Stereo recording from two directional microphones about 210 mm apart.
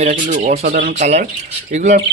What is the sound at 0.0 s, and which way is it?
Speech, 30° right (ahead or behind).